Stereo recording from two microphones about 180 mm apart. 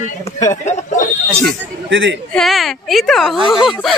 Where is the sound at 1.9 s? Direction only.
85° right.